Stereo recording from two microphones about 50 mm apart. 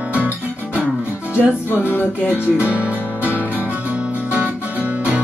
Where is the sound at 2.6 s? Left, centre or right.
Right.